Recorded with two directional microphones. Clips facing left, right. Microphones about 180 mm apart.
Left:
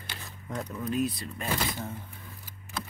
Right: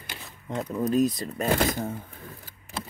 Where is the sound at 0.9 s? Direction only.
40° right (ahead or behind).